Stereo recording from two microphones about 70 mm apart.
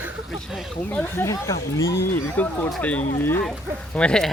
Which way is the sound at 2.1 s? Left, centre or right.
Left.